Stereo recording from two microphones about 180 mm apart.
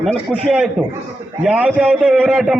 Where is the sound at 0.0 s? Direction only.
Centre (ahead or behind).